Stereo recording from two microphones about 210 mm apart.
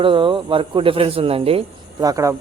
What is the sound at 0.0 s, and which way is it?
Speech, 25° right (ahead or behind).